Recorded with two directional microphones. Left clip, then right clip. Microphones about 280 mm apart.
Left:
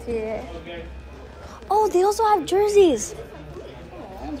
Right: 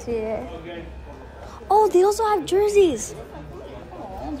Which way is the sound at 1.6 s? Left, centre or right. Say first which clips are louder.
Right 2 dB; centre.